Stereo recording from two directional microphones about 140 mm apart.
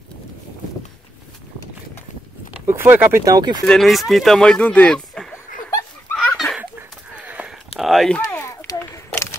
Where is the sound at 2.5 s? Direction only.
15° right (ahead or behind).